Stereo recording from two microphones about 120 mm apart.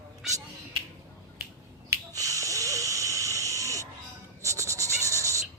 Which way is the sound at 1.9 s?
30° right (ahead or behind).